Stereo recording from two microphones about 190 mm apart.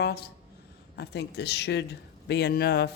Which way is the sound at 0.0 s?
55° left (ahead or behind).